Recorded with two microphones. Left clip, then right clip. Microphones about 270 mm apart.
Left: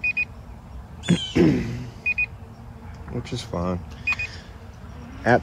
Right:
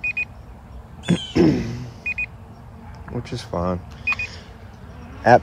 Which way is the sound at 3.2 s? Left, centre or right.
Centre.